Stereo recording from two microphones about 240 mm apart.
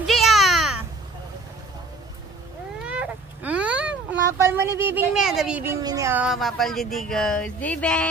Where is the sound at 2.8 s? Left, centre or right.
Centre.